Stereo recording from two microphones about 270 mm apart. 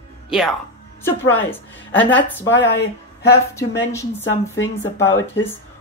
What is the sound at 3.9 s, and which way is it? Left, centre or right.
Speech, centre.